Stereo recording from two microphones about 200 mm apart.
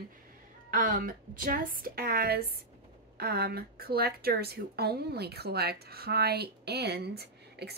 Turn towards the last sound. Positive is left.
turn(degrees=-55)  # may be behind; listen again after turning